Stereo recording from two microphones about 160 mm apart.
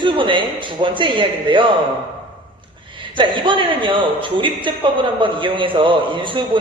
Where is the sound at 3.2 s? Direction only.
30° right (ahead or behind).